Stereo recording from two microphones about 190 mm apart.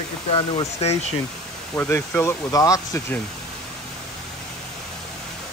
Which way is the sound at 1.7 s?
10° left (ahead or behind).